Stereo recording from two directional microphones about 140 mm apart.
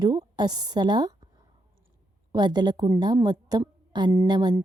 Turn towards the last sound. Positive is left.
turn(degrees=-30)  # may be behind; listen again after turning